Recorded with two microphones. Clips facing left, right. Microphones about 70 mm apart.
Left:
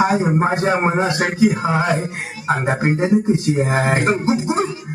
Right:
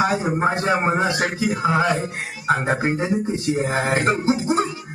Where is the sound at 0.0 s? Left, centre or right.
Left.